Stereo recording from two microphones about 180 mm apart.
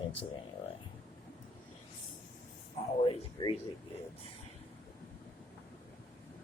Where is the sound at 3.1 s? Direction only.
30° left (ahead or behind).